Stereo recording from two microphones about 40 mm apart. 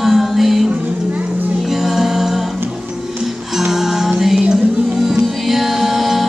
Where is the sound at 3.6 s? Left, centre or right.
Centre.